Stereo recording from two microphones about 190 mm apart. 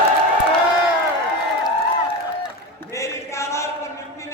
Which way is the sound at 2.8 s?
15° left (ahead or behind).